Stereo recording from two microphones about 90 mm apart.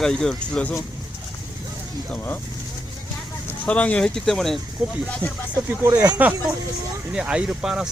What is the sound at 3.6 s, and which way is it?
Speech, 15° left (ahead or behind).